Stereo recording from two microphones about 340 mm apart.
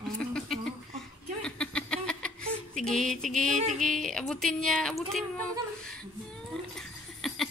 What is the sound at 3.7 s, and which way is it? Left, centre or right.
A woman's voice, centre.